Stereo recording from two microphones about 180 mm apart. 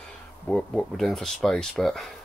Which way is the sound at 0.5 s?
5° left (ahead or behind).